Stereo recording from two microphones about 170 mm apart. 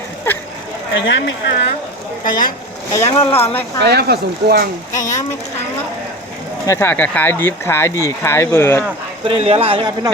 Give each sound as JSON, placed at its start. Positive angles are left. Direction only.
{"t": 0.3, "sound": "a sound", "side_deg": 10}
{"t": 0.9, "sound": "speech", "side_deg": 90}
{"t": 2.2, "sound": "speech", "side_deg": 55}
{"t": 2.9, "sound": "speech", "side_deg": 15}
{"t": 3.8, "sound": "speech", "side_deg": -75}
{"t": 4.9, "sound": "speech", "side_deg": 20}
{"t": 6.7, "sound": "speech", "side_deg": 15}
{"t": 9.2, "sound": "a man's voice", "side_deg": -35}